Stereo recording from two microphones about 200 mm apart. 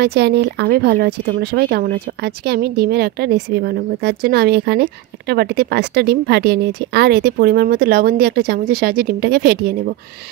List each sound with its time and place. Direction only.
0.0 s speech: 55° right (ahead or behind)